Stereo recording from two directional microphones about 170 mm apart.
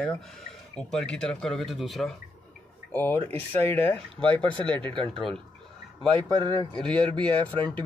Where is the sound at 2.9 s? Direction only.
10° left (ahead or behind).